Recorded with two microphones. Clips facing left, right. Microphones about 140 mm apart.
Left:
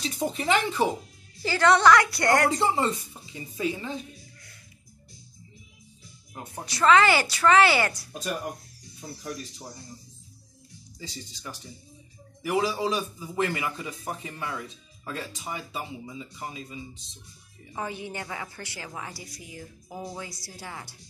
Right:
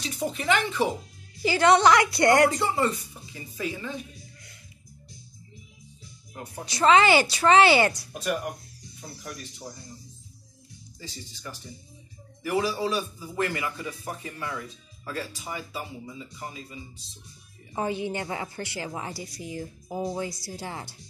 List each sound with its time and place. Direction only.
0.0 s speech: 35° left (ahead or behind)
1.4 s a woman's voice: 15° right (ahead or behind)
2.6 s speech: 30° left (ahead or behind)
6.6 s a woman's voice: 20° right (ahead or behind)
8.1 s a man's voice: 30° left (ahead or behind)
12.4 s a man's voice: 15° left (ahead or behind)
17.7 s a woman's voice: 25° right (ahead or behind)